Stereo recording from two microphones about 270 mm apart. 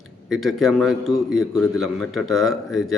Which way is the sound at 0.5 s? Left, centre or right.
Centre.